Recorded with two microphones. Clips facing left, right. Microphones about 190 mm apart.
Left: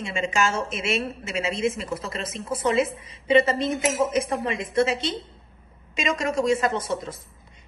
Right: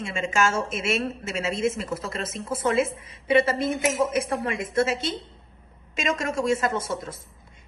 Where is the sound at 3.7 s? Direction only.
Centre (ahead or behind).